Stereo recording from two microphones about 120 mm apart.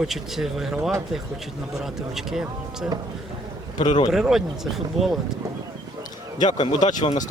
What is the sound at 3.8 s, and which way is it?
Speech, 35° left (ahead or behind).